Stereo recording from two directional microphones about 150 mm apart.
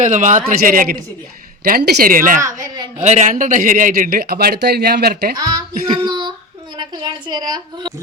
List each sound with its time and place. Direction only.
0.0 s speech: 55° right (ahead or behind)
1.6 s a man's voice: 90° right; by 2.4 s 65° right (ahead or behind)
2.4 s speech: 20° right (ahead or behind)
3.0 s a man's voice: 50° right (ahead or behind); by 5.4 s 90° right
5.4 s a woman's voice: 25° right (ahead or behind)